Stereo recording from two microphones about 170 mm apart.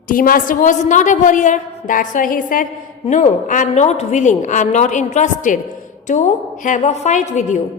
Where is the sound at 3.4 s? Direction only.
45° left (ahead or behind).